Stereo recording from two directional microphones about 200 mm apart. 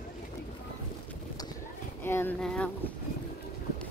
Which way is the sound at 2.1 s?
10° left (ahead or behind).